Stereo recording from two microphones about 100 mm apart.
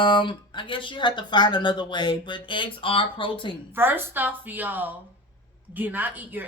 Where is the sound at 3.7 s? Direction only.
20° right (ahead or behind).